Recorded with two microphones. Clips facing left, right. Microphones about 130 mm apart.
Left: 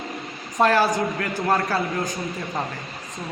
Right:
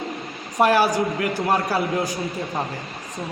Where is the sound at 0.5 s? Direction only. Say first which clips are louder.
Right 1 dB; 10° right (ahead or behind).